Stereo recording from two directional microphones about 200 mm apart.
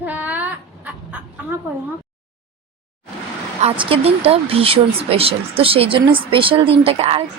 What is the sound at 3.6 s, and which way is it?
Speech, 30° right (ahead or behind).